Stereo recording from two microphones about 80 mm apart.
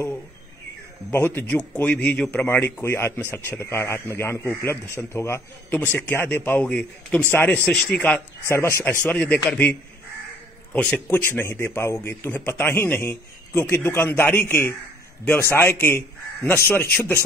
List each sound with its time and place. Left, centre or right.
1.1 s a man's voice: left
2.4 s a man's voice: left
5.9 s a man's voice: left
8.5 s a man's voice: left
9.0 s a man's voice: centre